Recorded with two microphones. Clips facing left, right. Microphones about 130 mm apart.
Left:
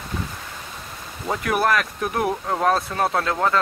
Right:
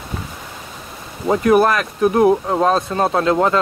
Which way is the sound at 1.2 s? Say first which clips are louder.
Right 8 dB; 25° right (ahead or behind).